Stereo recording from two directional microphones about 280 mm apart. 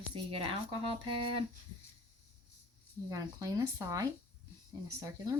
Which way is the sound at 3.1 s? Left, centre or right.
Centre.